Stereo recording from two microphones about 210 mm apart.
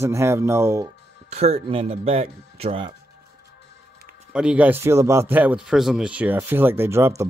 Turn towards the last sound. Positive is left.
turn(degrees=-10)  # may be behind; listen again after turning